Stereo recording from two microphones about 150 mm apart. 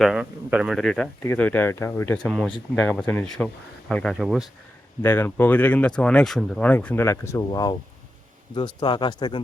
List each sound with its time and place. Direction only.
0.0 s speech: 5° right (ahead or behind)
1.2 s speech: 15° left (ahead or behind)
2.1 s speech: 5° left (ahead or behind)
5.0 s speech: 15° left (ahead or behind); by 9.4 s 30° left (ahead or behind)